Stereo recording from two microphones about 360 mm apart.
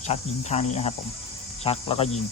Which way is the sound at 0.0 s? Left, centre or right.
Centre.